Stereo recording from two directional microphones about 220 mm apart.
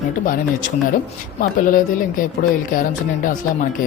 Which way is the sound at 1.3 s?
40° left (ahead or behind).